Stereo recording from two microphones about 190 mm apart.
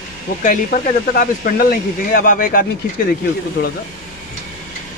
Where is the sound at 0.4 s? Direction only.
45° left (ahead or behind).